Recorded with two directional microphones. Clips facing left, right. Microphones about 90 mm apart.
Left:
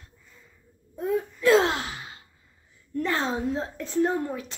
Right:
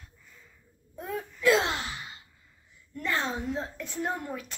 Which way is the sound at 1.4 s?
45° left (ahead or behind).